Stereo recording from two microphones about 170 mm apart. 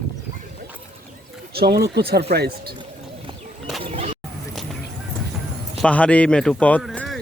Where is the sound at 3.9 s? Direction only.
35° right (ahead or behind).